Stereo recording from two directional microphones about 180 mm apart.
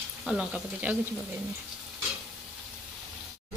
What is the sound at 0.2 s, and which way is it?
Speech, 5° right (ahead or behind).